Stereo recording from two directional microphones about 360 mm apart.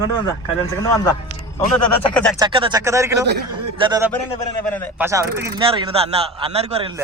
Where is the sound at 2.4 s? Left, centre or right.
Centre.